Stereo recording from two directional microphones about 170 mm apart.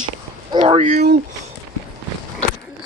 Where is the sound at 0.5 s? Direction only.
35° right (ahead or behind).